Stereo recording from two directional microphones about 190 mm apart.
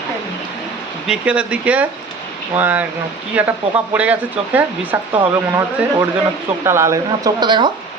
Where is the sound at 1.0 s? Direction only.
5° right (ahead or behind).